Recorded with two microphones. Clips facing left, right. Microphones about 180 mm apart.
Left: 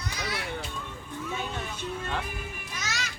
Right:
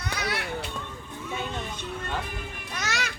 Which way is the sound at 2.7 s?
65° right (ahead or behind).